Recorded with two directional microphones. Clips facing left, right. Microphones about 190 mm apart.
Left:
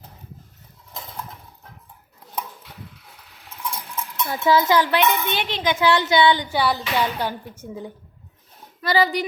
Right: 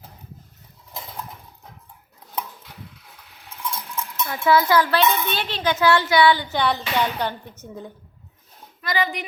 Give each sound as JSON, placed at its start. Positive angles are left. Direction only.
{"t": 4.3, "sound": "speech", "side_deg": 25}
{"t": 8.8, "sound": "speech", "side_deg": 35}